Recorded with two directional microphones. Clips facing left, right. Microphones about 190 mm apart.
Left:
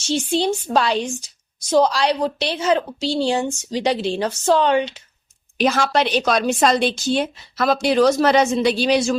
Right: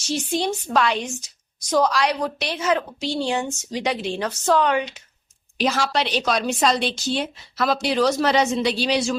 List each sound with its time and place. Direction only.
0.1 s a woman's voice: 30° left (ahead or behind)
5.5 s a woman's voice: 55° left (ahead or behind)